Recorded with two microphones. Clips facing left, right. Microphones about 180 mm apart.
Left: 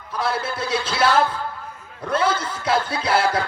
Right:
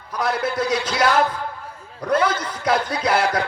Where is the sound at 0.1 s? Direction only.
30° left (ahead or behind).